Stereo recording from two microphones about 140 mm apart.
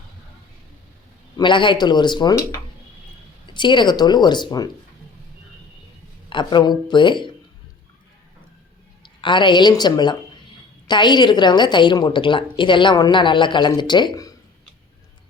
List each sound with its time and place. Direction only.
1.4 s a woman's voice: 35° left (ahead or behind)
6.3 s a woman's voice: 30° left (ahead or behind)
9.0 s a woman's voice: 35° left (ahead or behind)